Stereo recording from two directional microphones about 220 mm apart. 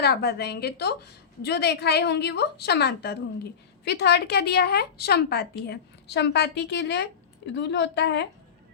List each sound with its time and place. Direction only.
0.0 s a woman's voice: 45° left (ahead or behind)